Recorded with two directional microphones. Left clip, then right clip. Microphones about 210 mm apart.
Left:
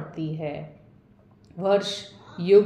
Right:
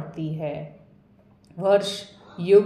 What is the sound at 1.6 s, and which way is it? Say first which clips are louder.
A man's voice: right 2 dB; 20° right (ahead or behind).